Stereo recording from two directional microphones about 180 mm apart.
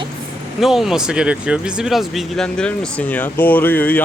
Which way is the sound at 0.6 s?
Centre (ahead or behind).